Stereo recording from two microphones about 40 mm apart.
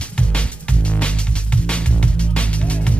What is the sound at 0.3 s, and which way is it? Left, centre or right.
Music, left.